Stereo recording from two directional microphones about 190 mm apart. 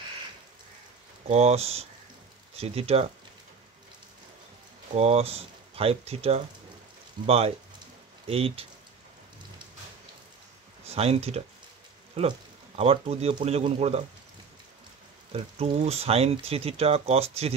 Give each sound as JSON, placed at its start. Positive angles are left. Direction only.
{"t": 1.3, "sound": "speech", "side_deg": -35}
{"t": 4.9, "sound": "speech", "side_deg": -35}
{"t": 10.9, "sound": "speech", "side_deg": -30}
{"t": 15.3, "sound": "speech", "side_deg": -35}